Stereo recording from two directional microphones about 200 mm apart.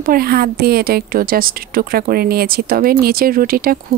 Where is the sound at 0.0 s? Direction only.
45° right (ahead or behind).